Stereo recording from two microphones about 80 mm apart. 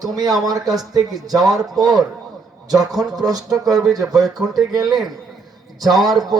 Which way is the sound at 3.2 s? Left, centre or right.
Right.